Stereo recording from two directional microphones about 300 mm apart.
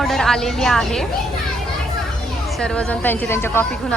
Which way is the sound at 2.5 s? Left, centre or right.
Centre.